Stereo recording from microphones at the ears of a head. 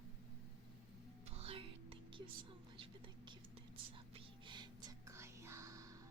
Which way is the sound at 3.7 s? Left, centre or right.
Right.